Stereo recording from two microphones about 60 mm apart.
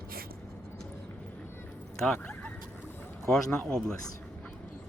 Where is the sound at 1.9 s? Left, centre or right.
Centre.